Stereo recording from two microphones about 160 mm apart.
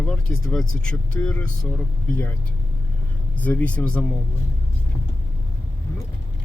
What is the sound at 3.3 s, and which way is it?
Speech, 10° left (ahead or behind).